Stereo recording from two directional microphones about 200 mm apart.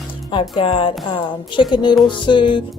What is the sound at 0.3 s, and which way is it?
Speech, 25° left (ahead or behind).